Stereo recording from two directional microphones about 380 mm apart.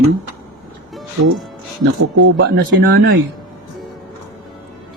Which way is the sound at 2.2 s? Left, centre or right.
Right.